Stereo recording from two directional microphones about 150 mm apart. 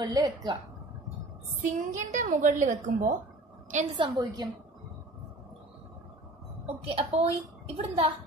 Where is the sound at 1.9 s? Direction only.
55° right (ahead or behind).